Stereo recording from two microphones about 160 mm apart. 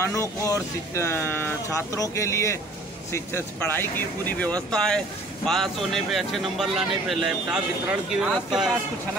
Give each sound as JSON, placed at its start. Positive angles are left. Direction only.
{"t": 0.0, "sound": "speech", "side_deg": 20}